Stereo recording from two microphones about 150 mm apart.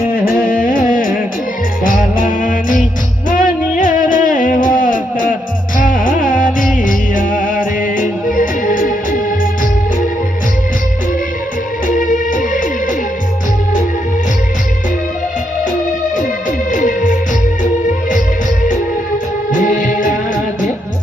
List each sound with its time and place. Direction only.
0.1 s music: 70° left (ahead or behind)
11.9 s music: 60° left (ahead or behind)
16.1 s music: 60° left (ahead or behind)
19.5 s music: 60° left (ahead or behind)